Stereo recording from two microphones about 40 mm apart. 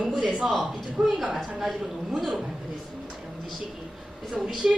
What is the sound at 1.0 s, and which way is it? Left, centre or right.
Speech, centre.